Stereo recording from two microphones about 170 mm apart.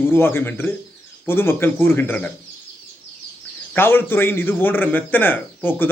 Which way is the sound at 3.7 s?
10° left (ahead or behind).